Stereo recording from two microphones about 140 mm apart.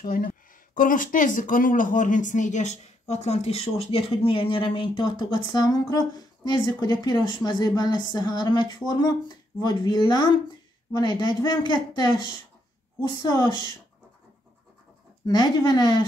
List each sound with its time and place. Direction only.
0.0 s speech: 80° left; by 13.6 s 25° left (ahead or behind)
15.2 s speech: 30° left (ahead or behind)